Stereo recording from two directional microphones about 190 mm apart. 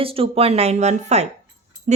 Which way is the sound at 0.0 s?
30° right (ahead or behind).